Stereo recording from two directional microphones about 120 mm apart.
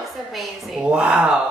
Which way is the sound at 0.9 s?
10° right (ahead or behind).